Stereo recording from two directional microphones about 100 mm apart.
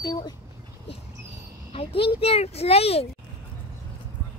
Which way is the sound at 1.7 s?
75° left (ahead or behind).